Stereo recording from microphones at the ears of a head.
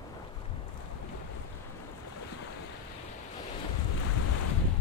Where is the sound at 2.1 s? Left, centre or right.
Left.